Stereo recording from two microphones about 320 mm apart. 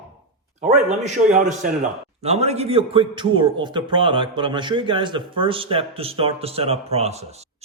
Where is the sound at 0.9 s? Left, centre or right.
Right.